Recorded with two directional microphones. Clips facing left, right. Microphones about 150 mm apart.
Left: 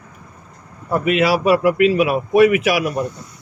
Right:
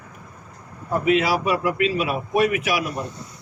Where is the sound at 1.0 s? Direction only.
70° left (ahead or behind).